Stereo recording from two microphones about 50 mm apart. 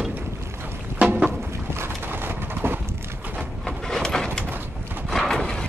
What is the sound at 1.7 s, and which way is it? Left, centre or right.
Clip-clop, right.